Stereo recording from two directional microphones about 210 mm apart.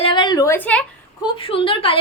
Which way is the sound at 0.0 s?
20° left (ahead or behind).